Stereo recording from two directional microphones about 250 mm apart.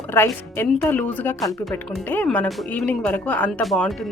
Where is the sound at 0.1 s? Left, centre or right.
Centre.